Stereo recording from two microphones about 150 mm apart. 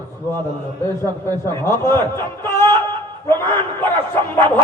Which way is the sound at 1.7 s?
15° left (ahead or behind).